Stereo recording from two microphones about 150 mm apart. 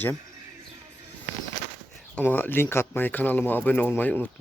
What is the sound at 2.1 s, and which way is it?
Speech, 10° left (ahead or behind).